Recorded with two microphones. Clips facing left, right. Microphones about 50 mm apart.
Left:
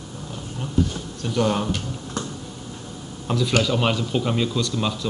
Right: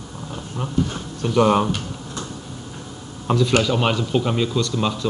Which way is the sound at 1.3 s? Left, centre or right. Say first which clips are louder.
Right 5 dB; centre.